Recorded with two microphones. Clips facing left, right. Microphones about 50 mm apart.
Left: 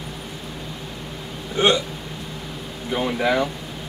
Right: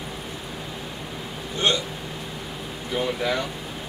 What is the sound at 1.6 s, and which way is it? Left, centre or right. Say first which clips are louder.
Speech: left 5 dB; centre.